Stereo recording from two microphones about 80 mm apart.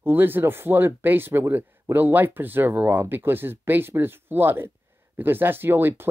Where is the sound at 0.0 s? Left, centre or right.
Right.